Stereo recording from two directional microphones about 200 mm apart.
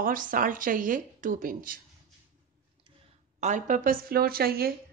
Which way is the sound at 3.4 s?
40° right (ahead or behind).